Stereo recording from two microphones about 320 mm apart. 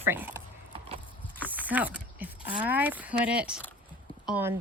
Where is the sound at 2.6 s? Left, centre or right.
Centre.